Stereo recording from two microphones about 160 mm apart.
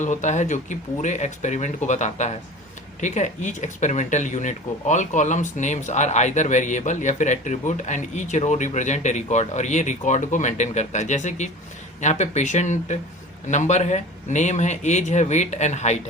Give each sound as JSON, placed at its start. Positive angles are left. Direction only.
{"t": 0.0, "sound": "speech", "side_deg": 50}